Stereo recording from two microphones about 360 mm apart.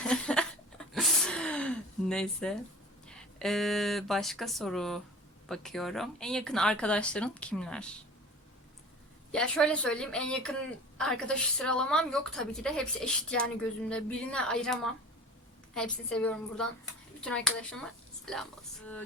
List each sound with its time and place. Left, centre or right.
0.0 s a sound: centre
3.1 s a woman's voice: centre
9.3 s a woman's voice: centre